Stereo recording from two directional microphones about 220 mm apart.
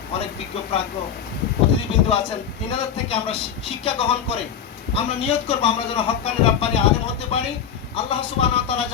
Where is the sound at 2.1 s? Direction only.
25° left (ahead or behind).